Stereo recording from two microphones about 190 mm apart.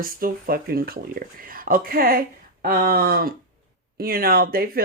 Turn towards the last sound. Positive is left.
turn(degrees=-50)  # may be behind; listen again after turning